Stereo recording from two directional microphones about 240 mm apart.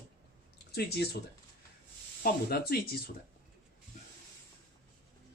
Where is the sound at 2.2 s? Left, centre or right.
Left.